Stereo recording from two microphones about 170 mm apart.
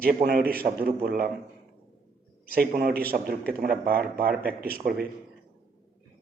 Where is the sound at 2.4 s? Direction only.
60° right (ahead or behind).